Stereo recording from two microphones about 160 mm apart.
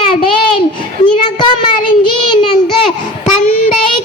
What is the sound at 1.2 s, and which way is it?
Child singing, 30° left (ahead or behind).